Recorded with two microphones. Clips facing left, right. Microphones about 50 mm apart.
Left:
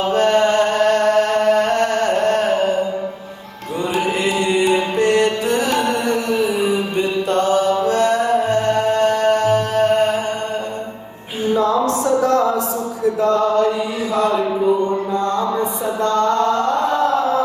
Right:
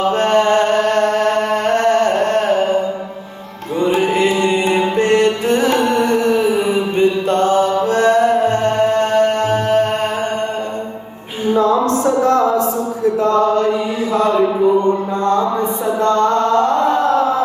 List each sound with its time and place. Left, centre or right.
0.1 s chant: right
3.8 s music: right
11.5 s a sound: right
13.2 s chant: right
16.0 s mantra: right